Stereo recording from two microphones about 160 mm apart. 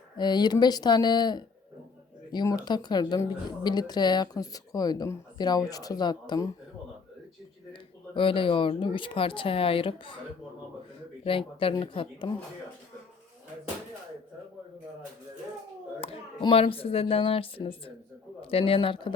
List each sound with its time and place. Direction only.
0.2 s speech: 25° left (ahead or behind)
7.7 s speech: 30° left (ahead or behind)
11.3 s speech: 35° left (ahead or behind)
16.0 s a man's voice: 35° left (ahead or behind)